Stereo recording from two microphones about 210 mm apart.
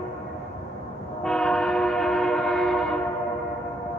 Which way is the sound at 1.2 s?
5° left (ahead or behind).